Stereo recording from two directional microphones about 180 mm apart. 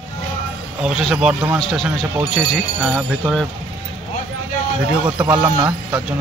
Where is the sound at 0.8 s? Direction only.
5° right (ahead or behind).